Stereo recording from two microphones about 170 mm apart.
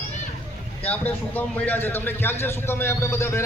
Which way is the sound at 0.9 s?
10° left (ahead or behind).